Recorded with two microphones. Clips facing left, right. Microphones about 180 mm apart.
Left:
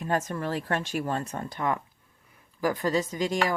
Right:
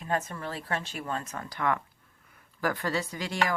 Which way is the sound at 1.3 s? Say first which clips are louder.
Left 1 dB; 25° left (ahead or behind).